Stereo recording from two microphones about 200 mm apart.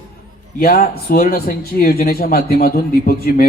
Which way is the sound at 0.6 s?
45° left (ahead or behind).